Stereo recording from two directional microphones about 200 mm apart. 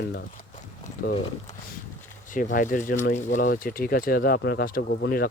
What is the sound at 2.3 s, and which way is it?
Speech, 40° left (ahead or behind).